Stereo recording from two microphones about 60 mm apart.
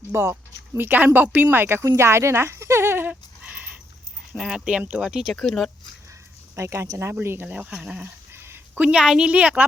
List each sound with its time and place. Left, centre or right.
0.1 s speech: right
0.8 s a woman's voice: right
1.6 s speech: right
3.1 s a sound: right
4.4 s a woman's voice: centre
5.3 s speech: centre
6.6 s a woman's voice: right
7.4 s speech: right
7.7 s a woman's voice: centre
8.3 s a sound: right
8.7 s a woman's voice: centre